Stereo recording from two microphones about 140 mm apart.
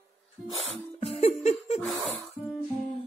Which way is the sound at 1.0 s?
50° left (ahead or behind).